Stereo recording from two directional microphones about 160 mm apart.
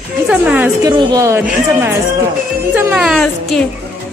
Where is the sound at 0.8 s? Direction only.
25° right (ahead or behind).